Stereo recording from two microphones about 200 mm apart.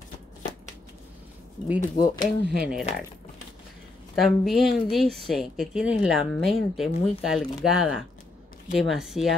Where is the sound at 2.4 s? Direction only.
55° right (ahead or behind).